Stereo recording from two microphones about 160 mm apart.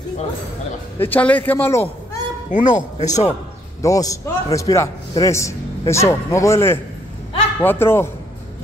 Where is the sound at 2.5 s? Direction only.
50° left (ahead or behind).